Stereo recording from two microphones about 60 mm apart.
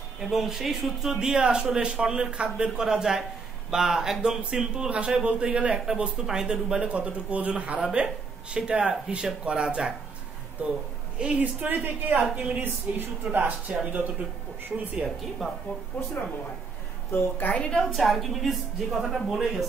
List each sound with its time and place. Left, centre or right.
0.2 s a man's voice: centre
11.1 s a woman's voice: centre
15.9 s a woman's voice: left
17.6 s a woman's voice: centre
17.9 s speech: centre